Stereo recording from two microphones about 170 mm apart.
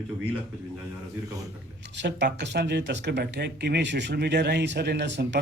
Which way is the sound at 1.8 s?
90° right.